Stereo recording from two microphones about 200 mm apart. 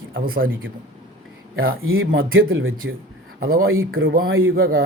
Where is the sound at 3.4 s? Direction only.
90° right.